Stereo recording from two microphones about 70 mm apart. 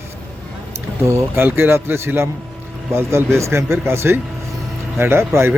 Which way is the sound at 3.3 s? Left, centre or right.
Right.